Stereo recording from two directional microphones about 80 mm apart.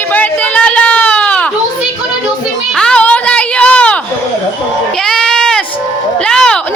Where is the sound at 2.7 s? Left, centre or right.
Centre.